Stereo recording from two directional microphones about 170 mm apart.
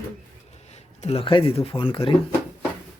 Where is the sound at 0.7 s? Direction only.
35° left (ahead or behind).